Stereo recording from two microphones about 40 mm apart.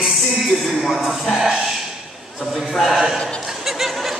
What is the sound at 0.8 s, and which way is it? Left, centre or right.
Speech, centre.